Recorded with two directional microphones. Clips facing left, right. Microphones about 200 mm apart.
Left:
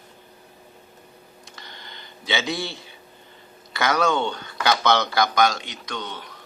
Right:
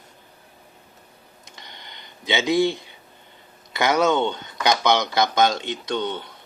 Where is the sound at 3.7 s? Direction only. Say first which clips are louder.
Right 2 dB; 20° right (ahead or behind).